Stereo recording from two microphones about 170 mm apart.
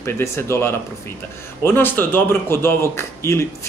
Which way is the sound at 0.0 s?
15° left (ahead or behind).